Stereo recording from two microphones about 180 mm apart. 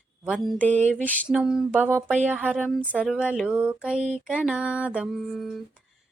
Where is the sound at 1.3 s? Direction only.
5° right (ahead or behind).